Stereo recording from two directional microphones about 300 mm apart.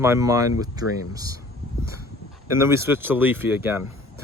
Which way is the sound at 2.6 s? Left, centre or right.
Centre.